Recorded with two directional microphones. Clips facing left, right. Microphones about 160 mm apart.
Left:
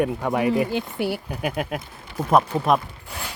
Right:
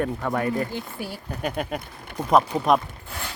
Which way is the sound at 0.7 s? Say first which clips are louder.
Left 7 dB; 80° left.